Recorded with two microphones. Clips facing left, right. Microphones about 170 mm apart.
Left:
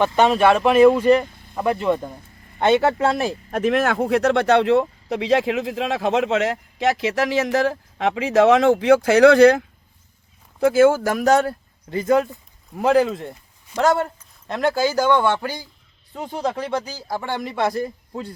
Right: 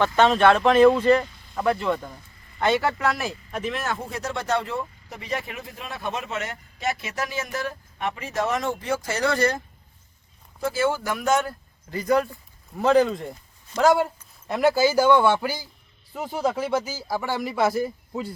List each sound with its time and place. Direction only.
0.0 s speech: 10° left (ahead or behind)
1.3 s vehicle: 55° left (ahead or behind)
1.5 s speech: 15° left (ahead or behind)
3.5 s speech: 55° left (ahead or behind); by 9.6 s 75° left (ahead or behind)
10.6 s speech: 55° left (ahead or behind); by 11.5 s 35° left (ahead or behind)
11.9 s speech: 25° left (ahead or behind)
12.8 s speech: 10° left (ahead or behind)